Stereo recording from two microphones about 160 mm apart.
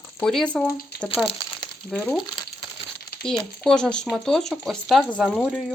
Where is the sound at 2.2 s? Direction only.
30° left (ahead or behind).